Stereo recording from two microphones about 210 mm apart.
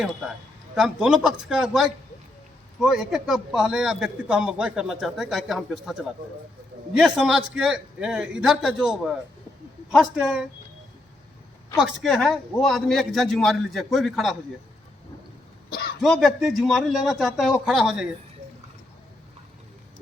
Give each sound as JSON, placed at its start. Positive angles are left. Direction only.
{"t": 0.8, "sound": "a man's voice", "side_deg": -5}
{"t": 11.8, "sound": "a man's voice", "side_deg": 0}
{"t": 16.2, "sound": "a man's voice", "side_deg": 0}